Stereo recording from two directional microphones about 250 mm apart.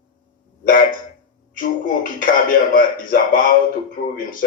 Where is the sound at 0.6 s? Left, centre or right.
Left.